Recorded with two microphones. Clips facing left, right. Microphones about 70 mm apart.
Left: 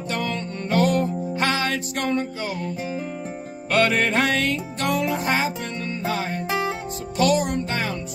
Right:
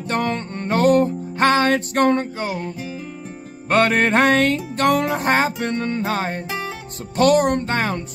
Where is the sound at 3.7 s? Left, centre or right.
Right.